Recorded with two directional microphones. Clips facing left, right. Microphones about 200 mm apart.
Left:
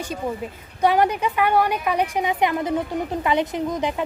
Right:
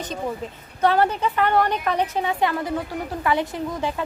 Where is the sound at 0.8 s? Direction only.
15° left (ahead or behind).